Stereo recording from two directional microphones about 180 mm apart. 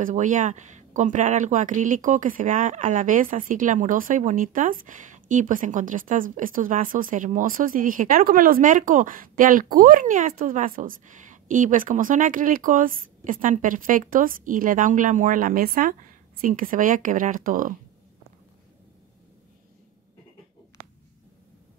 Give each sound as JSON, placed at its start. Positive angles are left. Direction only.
{"t": 0.0, "sound": "speech", "side_deg": -45}